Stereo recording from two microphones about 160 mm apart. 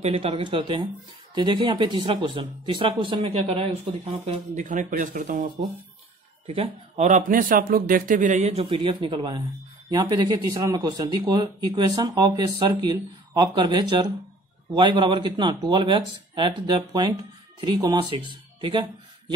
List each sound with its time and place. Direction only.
0.0 s speech: 35° right (ahead or behind)
4.6 s a man's voice: 55° right (ahead or behind)
6.4 s speech: 40° right (ahead or behind)
7.1 s a man's voice: 55° right (ahead or behind); by 18.9 s 30° right (ahead or behind)